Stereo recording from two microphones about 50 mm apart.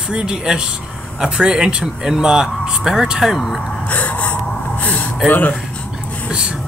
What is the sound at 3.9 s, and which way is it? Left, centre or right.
Gasp, left.